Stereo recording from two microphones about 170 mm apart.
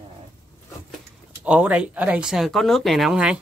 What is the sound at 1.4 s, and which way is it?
Speech, 5° right (ahead or behind).